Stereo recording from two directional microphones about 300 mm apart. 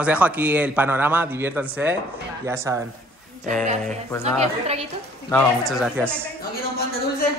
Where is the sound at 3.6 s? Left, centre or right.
Right.